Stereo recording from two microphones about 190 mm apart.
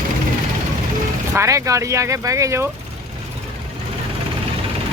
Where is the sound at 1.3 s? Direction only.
15° right (ahead or behind).